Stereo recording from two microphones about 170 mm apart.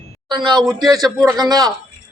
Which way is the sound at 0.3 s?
25° right (ahead or behind).